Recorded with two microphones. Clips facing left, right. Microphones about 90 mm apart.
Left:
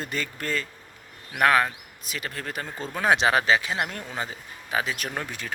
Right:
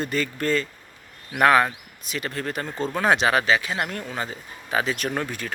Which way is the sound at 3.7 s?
15° left (ahead or behind).